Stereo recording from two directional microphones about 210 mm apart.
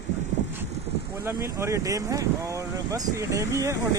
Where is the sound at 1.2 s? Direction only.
15° right (ahead or behind).